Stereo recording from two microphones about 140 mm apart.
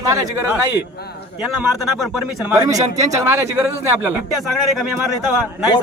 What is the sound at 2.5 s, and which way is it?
Speech, 25° right (ahead or behind).